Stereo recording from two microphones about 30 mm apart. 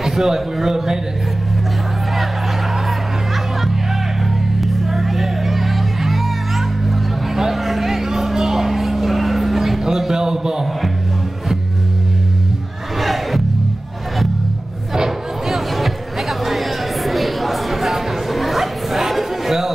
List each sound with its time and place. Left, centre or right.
0.0 s a man's voice: centre
4.6 s music: centre
7.6 s vehicle: centre
9.8 s a sound: centre
13.0 s music: centre
15.4 s a sound: centre
18.9 s chatter: centre